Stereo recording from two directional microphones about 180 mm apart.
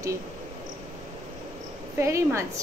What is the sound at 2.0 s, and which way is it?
Speech, 15° right (ahead or behind).